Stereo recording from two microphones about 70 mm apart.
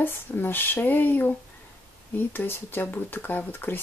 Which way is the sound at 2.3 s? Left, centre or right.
Left.